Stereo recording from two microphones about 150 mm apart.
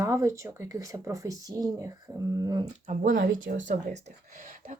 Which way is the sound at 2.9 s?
55° right (ahead or behind).